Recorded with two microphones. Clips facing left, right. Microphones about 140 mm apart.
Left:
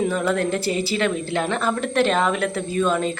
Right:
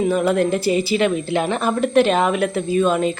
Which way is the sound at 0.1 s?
15° right (ahead or behind).